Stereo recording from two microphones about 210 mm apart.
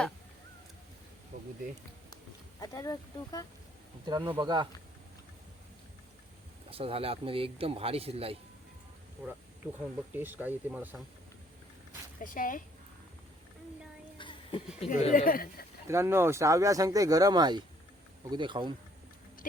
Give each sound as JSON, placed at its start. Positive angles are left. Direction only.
{"t": 2.6, "sound": "speech", "side_deg": 15}
{"t": 4.0, "sound": "speech", "side_deg": -20}
{"t": 6.7, "sound": "speech", "side_deg": -25}
{"t": 9.2, "sound": "speech", "side_deg": -5}
{"t": 12.2, "sound": "speech", "side_deg": 40}
{"t": 14.2, "sound": "music", "side_deg": 25}
{"t": 14.8, "sound": "speech", "side_deg": 35}
{"t": 15.9, "sound": "speech", "side_deg": -10}